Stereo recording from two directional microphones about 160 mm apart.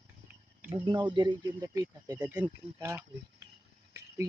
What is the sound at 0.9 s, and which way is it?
Speech, 30° right (ahead or behind).